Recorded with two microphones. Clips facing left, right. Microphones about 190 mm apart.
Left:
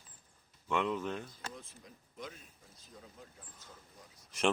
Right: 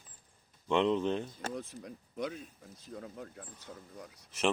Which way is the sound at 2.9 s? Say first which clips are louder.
Right 10 dB; 65° right (ahead or behind).